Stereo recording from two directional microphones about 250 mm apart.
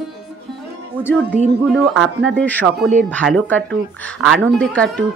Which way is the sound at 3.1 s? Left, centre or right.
Centre.